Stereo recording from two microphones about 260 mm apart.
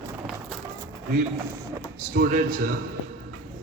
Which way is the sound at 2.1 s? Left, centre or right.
Right.